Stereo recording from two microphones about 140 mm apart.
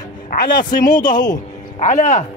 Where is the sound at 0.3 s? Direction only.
85° left.